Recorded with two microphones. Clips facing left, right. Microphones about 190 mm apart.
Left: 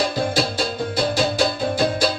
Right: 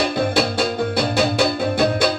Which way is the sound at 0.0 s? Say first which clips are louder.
Right 2 dB; 60° right (ahead or behind).